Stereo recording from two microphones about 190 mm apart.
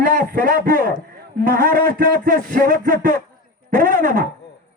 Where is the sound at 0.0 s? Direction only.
45° right (ahead or behind).